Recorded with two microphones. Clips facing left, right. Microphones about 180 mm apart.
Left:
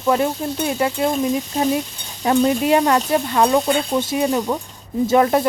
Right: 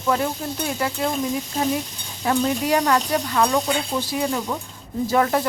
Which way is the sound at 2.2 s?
25° left (ahead or behind).